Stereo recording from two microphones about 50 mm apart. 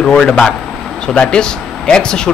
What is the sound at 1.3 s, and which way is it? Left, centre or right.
Speech, centre.